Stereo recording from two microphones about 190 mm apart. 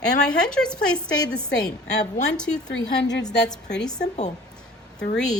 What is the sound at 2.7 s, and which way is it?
Speech, 65° left (ahead or behind).